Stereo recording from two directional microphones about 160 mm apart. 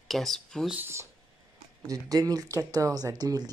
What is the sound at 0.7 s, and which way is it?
Speech, 15° right (ahead or behind).